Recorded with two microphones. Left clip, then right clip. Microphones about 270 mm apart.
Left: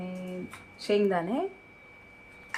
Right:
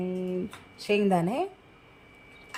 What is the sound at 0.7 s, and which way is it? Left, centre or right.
Speech, right.